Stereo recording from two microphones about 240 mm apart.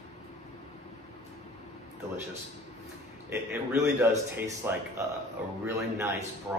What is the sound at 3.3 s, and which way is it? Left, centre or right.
A man's voice, centre.